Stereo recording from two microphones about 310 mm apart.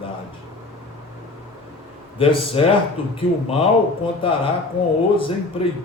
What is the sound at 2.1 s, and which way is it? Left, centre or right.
A man's voice, centre.